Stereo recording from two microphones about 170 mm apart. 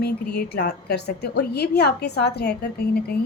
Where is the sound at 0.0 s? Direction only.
70° left (ahead or behind).